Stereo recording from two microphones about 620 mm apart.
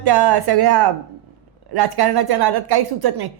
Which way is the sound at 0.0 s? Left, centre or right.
Right.